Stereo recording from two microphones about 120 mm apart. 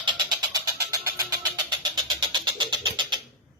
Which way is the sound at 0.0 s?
40° right (ahead or behind).